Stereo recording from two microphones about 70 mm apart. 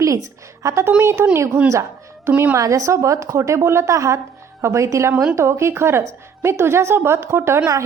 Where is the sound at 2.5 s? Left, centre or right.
Right.